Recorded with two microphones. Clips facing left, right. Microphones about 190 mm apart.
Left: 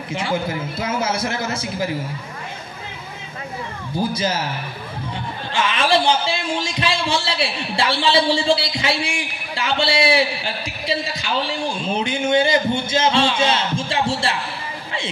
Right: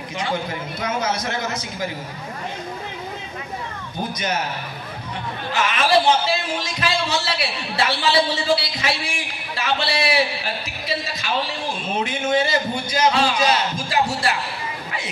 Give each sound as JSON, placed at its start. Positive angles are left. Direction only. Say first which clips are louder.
{"t": 0.1, "sound": "a man's voice", "louder": "left 3 dB", "side_deg": 25}
{"t": 4.1, "sound": "a man's voice", "louder": "left 2 dB", "side_deg": 30}
{"t": 5.5, "sound": "a man's voice", "louder": "even", "side_deg": 25}